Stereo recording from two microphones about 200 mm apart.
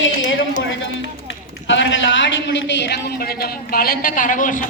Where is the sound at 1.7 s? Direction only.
65° left (ahead or behind).